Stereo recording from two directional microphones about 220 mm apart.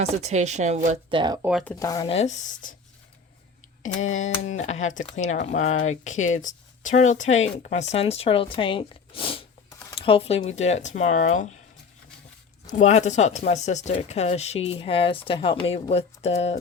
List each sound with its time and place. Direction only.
0.0 s a woman's voice: 30° right (ahead or behind)
1.4 s speech: 5° right (ahead or behind)
1.6 s speech: 10° left (ahead or behind); by 2.7 s 35° left (ahead or behind)
4.2 s speech: 30° left (ahead or behind)
9.6 s a sound: 15° left (ahead or behind)
10.0 s speech: 25° left (ahead or behind)
12.6 s speech: 35° left (ahead or behind)